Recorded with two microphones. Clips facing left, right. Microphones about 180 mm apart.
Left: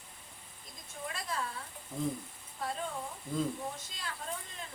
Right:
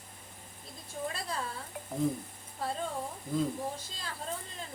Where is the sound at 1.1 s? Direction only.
35° right (ahead or behind).